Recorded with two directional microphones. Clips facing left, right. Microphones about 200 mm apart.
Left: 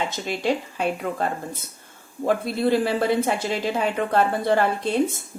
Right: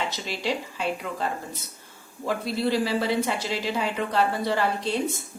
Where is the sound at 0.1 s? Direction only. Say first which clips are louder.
Left 5 dB; 50° left (ahead or behind).